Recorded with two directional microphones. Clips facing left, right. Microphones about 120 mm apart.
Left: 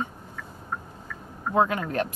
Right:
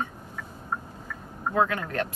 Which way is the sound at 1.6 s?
20° left (ahead or behind).